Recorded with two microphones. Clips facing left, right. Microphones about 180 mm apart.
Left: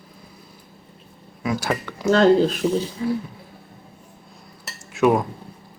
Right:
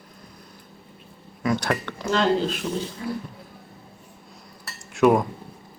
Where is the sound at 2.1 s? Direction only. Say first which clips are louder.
Left 7 dB; 45° left (ahead or behind).